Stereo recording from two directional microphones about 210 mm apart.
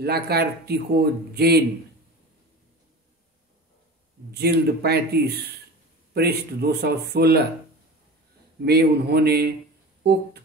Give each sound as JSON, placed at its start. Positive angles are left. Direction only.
{"t": 0.0, "sound": "a man's voice", "side_deg": -50}
{"t": 4.3, "sound": "a man's voice", "side_deg": -50}
{"t": 8.6, "sound": "a man's voice", "side_deg": -50}